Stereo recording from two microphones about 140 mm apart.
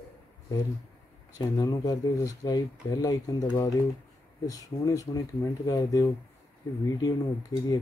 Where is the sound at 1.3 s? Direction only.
25° left (ahead or behind).